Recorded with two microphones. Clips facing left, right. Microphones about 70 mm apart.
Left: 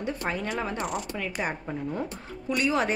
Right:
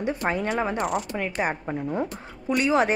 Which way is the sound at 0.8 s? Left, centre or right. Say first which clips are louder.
Right 5 dB; centre.